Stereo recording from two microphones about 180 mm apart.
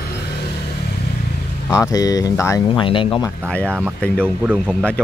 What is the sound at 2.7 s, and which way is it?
Speech, 30° left (ahead or behind).